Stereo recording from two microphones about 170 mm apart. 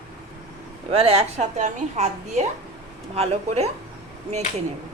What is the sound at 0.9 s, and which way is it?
A woman's voice, 35° right (ahead or behind).